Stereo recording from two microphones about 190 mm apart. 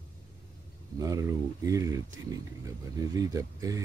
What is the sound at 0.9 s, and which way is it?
Speech, 15° right (ahead or behind).